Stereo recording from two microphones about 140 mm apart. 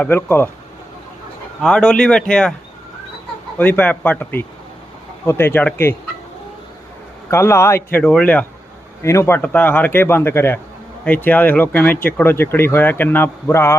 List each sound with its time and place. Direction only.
0.0 s speech: 15° left (ahead or behind)
1.6 s speech: 5° left (ahead or behind)
3.6 s speech: 10° left (ahead or behind)
7.3 s speech: 20° left (ahead or behind)